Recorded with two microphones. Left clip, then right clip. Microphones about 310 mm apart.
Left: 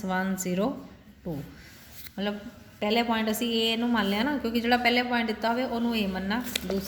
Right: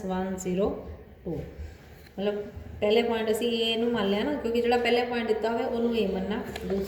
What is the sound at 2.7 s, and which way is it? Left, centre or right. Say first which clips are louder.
A woman's voice: right 2 dB; left.